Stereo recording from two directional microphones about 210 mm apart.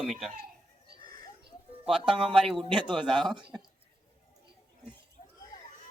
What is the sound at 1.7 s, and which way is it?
Speech, 25° right (ahead or behind).